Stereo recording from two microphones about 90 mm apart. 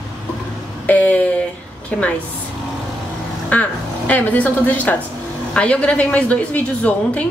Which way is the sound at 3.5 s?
20° left (ahead or behind).